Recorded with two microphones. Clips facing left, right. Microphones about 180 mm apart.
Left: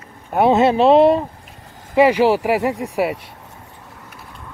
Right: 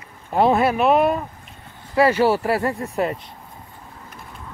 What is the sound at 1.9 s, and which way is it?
Speech, 15° left (ahead or behind).